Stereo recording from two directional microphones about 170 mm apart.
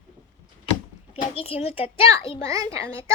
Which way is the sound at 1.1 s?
35° left (ahead or behind).